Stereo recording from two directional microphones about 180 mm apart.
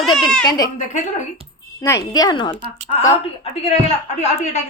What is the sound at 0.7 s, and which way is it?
Speech, 40° left (ahead or behind).